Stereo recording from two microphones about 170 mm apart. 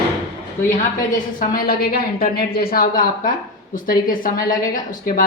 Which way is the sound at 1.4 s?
60° left (ahead or behind).